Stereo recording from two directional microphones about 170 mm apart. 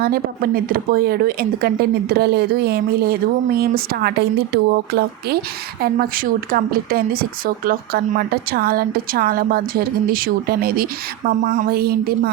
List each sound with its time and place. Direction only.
0.0 s speech: 60° right (ahead or behind)
5.8 s speech: 60° right (ahead or behind)
11.4 s speech: 45° right (ahead or behind)
11.7 s speech: 65° right (ahead or behind)